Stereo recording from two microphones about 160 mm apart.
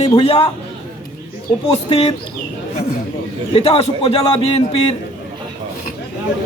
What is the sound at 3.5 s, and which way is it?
A man's voice, 40° left (ahead or behind).